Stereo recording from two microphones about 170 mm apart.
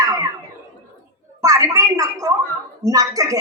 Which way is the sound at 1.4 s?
20° right (ahead or behind).